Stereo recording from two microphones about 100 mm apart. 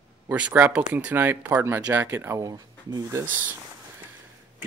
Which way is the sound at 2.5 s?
40° right (ahead or behind).